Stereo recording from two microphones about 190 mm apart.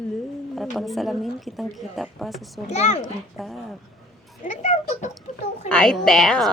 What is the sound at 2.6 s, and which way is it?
Speech, 35° left (ahead or behind).